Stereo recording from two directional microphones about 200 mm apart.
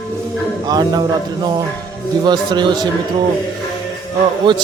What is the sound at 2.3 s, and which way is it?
Speech, 20° right (ahead or behind).